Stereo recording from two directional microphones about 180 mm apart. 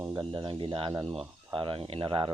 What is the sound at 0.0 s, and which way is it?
Speech, 25° right (ahead or behind).